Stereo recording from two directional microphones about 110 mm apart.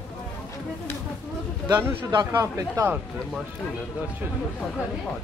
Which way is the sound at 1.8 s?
20° right (ahead or behind).